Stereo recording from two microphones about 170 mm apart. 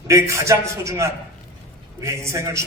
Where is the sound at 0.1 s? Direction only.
15° right (ahead or behind).